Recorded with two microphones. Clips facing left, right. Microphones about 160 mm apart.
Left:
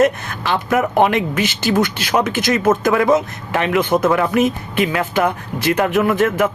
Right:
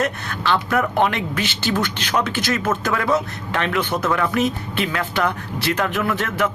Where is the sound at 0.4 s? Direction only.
15° left (ahead or behind).